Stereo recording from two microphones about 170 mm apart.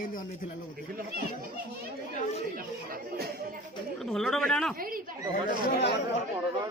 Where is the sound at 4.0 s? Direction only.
Centre (ahead or behind).